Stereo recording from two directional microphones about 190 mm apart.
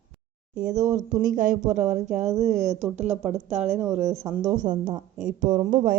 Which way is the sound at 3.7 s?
10° right (ahead or behind).